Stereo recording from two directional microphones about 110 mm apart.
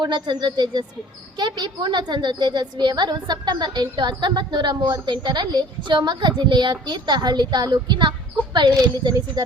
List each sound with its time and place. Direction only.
0.0 s a woman's voice: 40° right (ahead or behind)